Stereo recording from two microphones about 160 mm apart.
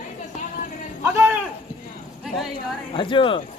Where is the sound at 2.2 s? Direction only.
Centre (ahead or behind).